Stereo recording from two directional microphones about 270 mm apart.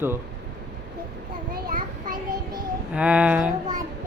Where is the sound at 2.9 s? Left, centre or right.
Centre.